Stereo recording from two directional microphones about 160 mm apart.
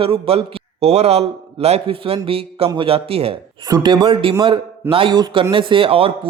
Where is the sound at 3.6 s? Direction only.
25° right (ahead or behind).